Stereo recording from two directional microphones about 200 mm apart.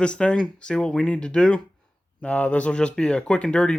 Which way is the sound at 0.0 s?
5° left (ahead or behind).